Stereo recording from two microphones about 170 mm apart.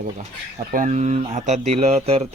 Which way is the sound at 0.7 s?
50° right (ahead or behind).